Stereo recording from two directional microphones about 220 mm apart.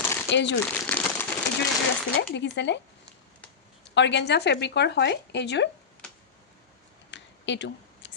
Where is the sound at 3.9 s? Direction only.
55° left (ahead or behind).